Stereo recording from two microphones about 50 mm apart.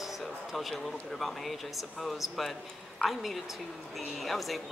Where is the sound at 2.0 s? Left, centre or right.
Centre.